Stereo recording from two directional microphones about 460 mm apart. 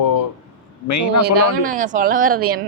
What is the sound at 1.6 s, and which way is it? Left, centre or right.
Speech, centre.